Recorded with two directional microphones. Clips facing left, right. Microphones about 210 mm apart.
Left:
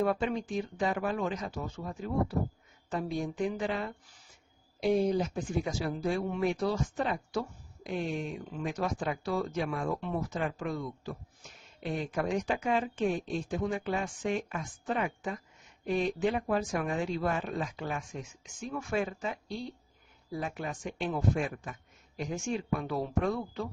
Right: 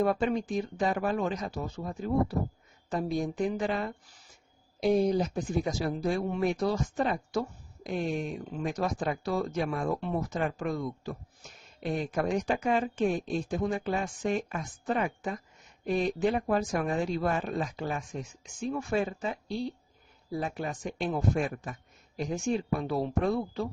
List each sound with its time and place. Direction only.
0.0 s speech: 40° right (ahead or behind)